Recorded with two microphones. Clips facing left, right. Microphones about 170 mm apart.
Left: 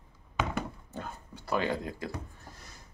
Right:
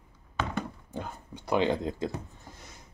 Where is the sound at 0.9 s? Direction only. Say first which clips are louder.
Right 3 dB; 15° right (ahead or behind).